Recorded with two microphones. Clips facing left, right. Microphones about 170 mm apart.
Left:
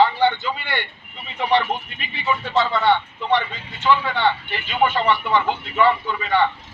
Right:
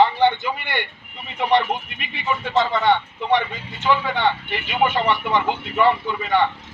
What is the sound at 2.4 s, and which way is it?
Speech, 20° right (ahead or behind).